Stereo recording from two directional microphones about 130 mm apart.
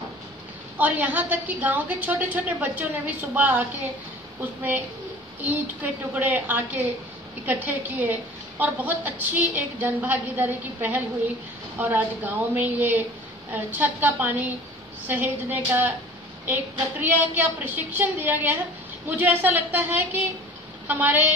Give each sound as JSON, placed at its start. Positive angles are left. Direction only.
{"t": 0.7, "sound": "a woman's voice", "side_deg": -10}
{"t": 17.0, "sound": "a woman's voice", "side_deg": -15}